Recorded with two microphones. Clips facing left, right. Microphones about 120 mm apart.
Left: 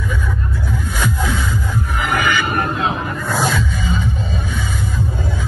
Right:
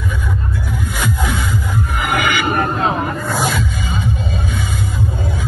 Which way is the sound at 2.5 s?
40° right (ahead or behind).